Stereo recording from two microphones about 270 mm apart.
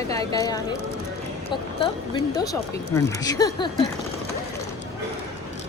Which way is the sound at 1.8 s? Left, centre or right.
Centre.